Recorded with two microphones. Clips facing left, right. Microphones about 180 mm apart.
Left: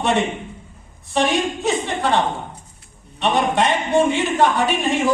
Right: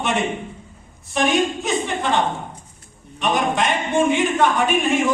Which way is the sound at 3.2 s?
35° left (ahead or behind).